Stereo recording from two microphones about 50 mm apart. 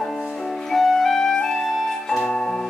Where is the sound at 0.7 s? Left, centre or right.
Centre.